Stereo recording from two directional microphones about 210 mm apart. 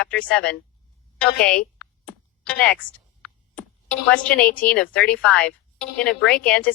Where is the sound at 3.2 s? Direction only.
5° left (ahead or behind).